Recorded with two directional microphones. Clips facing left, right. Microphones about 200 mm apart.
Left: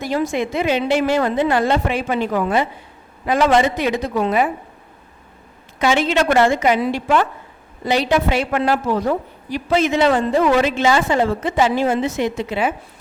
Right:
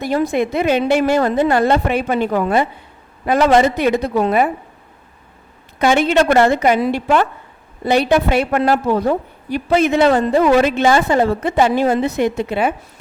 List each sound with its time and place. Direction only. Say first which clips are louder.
0.0 s a woman's voice: right 3 dB; 55° right (ahead or behind)
3.2 s a woman's voice: right 3 dB; 45° right (ahead or behind)
3.8 s a woman's voice: right 4 dB; 55° right (ahead or behind)
4.2 s a woman's voice: right 1 dB; 45° right (ahead or behind)
5.8 s a woman's voice: right 3 dB; 55° right (ahead or behind)
7.9 s a woman's voice: right 3 dB; 55° right (ahead or behind)
8.8 s a woman's voice: right 3 dB; 55° right (ahead or behind)
10.1 s a woman's voice: right 3 dB; 40° right (ahead or behind)
10.7 s a woman's voice: right 3 dB; 55° right (ahead or behind)